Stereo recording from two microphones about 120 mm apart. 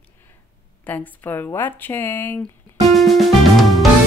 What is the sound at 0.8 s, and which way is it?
A woman's voice, 15° left (ahead or behind).